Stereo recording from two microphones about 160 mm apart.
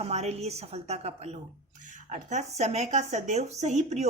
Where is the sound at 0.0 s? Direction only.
40° right (ahead or behind).